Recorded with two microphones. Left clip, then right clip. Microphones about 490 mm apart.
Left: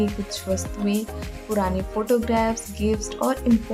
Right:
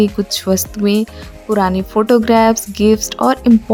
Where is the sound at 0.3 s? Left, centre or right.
Centre.